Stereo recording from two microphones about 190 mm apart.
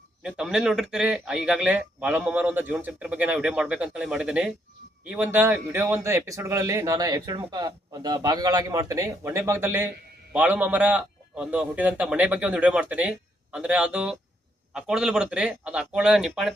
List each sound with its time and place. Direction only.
0.2 s speech: 5° right (ahead or behind)